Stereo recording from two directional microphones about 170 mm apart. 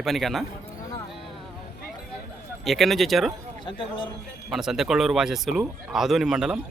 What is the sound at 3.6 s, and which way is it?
Speech, 30° left (ahead or behind).